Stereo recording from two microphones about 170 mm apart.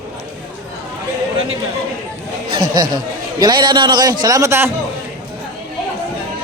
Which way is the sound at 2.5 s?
25° right (ahead or behind).